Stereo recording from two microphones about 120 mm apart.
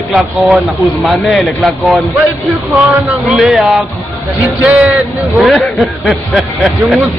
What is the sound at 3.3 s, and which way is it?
Speech, centre (ahead or behind).